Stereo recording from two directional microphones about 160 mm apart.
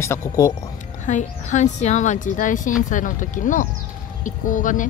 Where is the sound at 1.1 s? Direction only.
50° left (ahead or behind).